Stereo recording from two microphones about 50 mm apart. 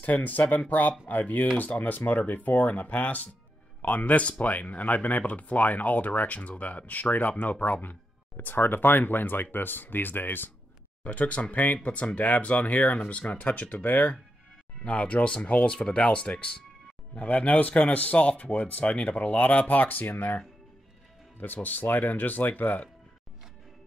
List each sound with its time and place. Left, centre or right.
0.0 s speech: left
11.1 s speech: left
18.9 s speech: centre
19.1 s speech: left
21.6 s speech: left